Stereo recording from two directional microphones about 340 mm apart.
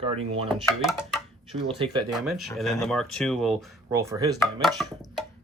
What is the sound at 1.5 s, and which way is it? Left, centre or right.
Speech, centre.